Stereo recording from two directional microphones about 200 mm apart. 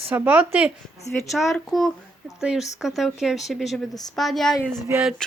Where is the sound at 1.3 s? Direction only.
Centre (ahead or behind).